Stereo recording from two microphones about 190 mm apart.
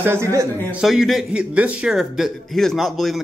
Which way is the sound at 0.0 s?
15° right (ahead or behind).